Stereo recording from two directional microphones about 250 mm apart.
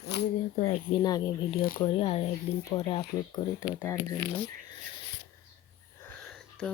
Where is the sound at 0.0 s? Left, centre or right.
Left.